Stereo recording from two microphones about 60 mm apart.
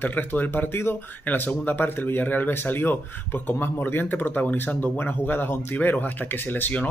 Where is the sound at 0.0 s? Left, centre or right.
Left.